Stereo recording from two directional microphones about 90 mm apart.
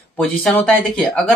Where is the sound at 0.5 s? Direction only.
15° left (ahead or behind).